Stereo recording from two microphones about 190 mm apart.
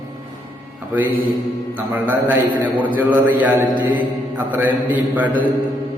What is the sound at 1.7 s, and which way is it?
A man's voice, 10° right (ahead or behind).